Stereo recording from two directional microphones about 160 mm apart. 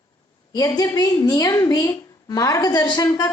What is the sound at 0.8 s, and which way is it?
A woman's voice, 25° left (ahead or behind).